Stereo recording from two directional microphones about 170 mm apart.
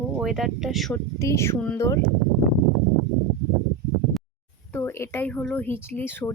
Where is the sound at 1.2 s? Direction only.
15° left (ahead or behind).